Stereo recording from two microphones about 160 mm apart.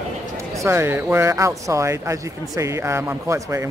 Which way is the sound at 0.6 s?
15° right (ahead or behind).